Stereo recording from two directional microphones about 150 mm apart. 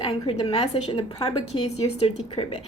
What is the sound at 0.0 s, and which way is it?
A woman's voice, 40° left (ahead or behind).